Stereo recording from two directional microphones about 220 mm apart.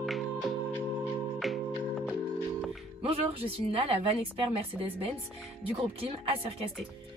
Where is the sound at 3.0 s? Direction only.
25° right (ahead or behind).